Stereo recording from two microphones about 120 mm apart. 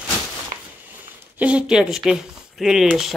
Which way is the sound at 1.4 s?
5° right (ahead or behind).